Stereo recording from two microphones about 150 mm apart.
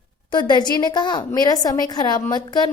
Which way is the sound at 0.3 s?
30° left (ahead or behind).